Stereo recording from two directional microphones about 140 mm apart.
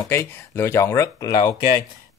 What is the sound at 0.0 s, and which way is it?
Speech, 20° left (ahead or behind).